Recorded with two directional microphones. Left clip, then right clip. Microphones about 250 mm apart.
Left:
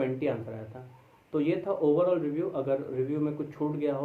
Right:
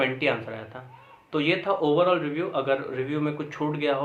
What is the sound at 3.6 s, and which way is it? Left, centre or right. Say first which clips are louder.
Speech: right 3 dB; right.